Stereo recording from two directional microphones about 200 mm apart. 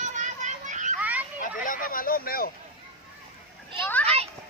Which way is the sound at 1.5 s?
40° left (ahead or behind).